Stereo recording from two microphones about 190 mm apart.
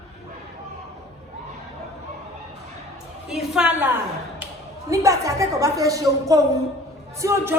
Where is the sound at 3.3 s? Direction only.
Centre (ahead or behind).